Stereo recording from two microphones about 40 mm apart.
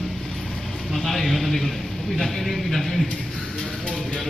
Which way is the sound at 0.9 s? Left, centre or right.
Centre.